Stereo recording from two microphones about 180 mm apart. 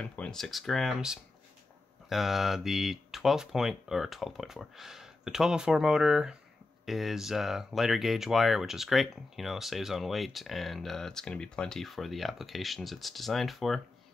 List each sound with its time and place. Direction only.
0.0 s speech: 5° left (ahead or behind)